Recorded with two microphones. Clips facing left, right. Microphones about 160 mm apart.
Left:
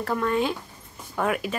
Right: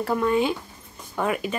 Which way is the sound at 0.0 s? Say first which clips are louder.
Right 3 dB; 5° right (ahead or behind).